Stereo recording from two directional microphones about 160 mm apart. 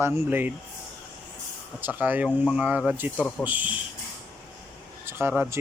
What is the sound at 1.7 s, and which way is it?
Speech, 10° right (ahead or behind).